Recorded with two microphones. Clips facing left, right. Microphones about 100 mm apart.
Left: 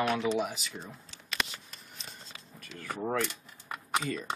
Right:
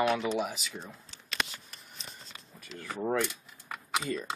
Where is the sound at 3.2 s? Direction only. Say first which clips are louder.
Right 1 dB; centre (ahead or behind).